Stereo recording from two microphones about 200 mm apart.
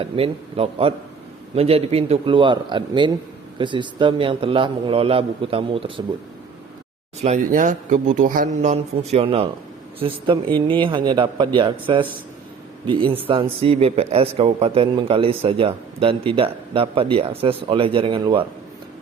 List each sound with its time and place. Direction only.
0.0 s a man's voice: 30° right (ahead or behind)
7.2 s a man's voice: 35° right (ahead or behind)